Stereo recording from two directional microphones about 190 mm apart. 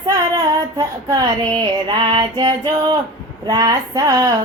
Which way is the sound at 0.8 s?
20° right (ahead or behind).